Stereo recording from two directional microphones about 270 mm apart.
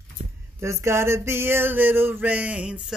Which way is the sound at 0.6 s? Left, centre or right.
Centre.